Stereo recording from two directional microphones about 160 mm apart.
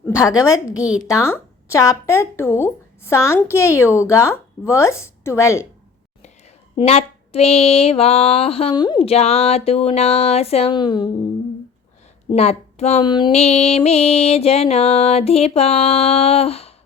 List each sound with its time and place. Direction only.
0.3 s a woman's voice: 20° left (ahead or behind)
0.7 s a woman's voice: 5° right (ahead or behind)
1.0 s speech: 15° left (ahead or behind)
6.7 s music: 40° left (ahead or behind)
9.0 s music: 40° left (ahead or behind)
12.3 s music: 40° left (ahead or behind)
13.1 s a woman's voice: 30° left (ahead or behind)
13.3 s music: 40° left (ahead or behind)